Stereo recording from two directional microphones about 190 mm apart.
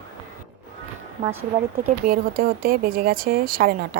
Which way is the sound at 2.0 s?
50° right (ahead or behind).